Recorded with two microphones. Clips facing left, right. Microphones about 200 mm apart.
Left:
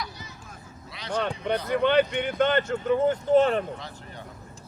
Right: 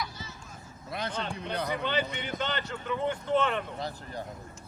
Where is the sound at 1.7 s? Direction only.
60° left (ahead or behind); by 3.6 s 40° left (ahead or behind).